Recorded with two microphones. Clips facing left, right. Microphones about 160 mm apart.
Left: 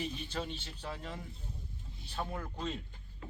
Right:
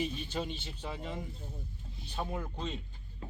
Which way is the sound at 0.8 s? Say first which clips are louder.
Right 4 dB; 10° right (ahead or behind).